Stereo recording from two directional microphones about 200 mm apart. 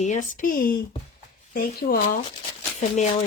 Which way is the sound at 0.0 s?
40° left (ahead or behind).